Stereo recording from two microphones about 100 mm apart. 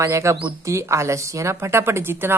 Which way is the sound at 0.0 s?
30° right (ahead or behind).